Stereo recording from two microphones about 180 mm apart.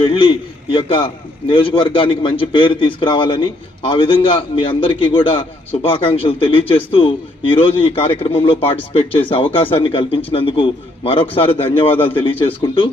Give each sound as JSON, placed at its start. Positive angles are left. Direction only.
{"t": 0.1, "sound": "a man's voice", "side_deg": 30}